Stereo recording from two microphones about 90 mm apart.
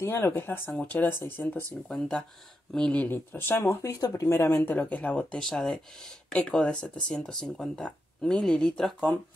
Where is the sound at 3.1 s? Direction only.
25° left (ahead or behind).